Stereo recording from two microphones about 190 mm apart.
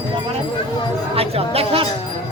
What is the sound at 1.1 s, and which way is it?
Speech, 30° right (ahead or behind).